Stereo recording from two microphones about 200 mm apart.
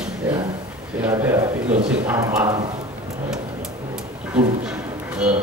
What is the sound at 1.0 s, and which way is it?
Speech, 10° right (ahead or behind).